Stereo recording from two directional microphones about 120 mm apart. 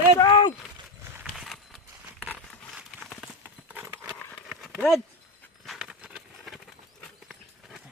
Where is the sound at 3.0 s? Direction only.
Centre (ahead or behind).